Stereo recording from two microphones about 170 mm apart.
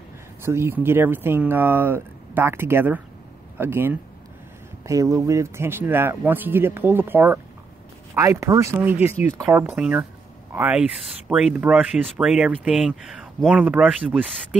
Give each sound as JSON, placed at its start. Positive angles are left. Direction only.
{"t": 0.4, "sound": "speech", "side_deg": -15}